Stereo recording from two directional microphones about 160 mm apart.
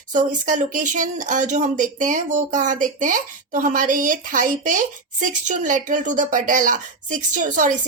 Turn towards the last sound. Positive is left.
turn(degrees=-55)  # may be behind; listen again after turning